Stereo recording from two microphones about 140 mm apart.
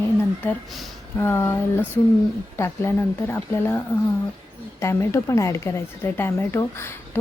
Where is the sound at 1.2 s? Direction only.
20° left (ahead or behind).